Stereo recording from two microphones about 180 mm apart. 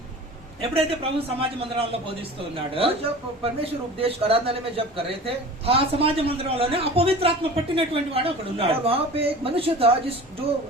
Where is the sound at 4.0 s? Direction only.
30° right (ahead or behind).